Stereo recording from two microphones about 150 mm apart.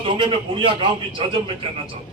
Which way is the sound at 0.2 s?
35° right (ahead or behind).